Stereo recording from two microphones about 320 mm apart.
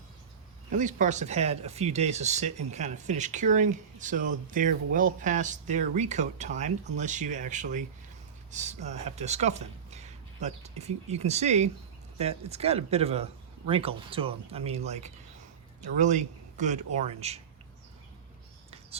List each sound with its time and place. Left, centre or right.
0.7 s speech: right